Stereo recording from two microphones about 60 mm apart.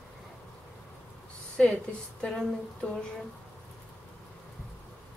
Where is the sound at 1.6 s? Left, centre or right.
Centre.